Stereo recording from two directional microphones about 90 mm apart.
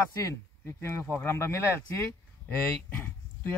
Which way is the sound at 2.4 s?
20° left (ahead or behind).